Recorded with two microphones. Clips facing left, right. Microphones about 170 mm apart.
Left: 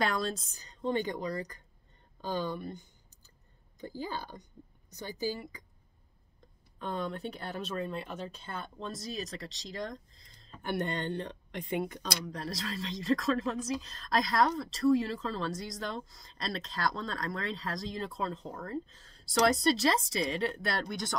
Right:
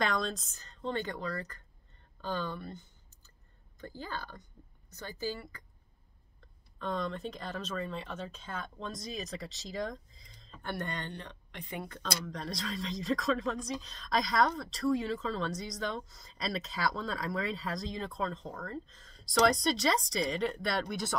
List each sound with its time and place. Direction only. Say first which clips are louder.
0.0 s a woman's voice: left 1 dB; 5° left (ahead or behind)
6.8 s speech: even; 10° left (ahead or behind)
10.6 s speech: left 5 dB; 20° left (ahead or behind)
12.3 s speech: even; 5° left (ahead or behind)